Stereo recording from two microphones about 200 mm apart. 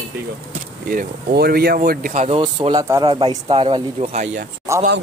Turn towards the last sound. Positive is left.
turn(degrees=-15)  # may be behind; listen again after turning